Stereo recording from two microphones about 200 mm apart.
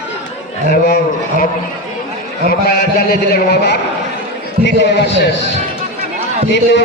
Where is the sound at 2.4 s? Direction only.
50° left (ahead or behind).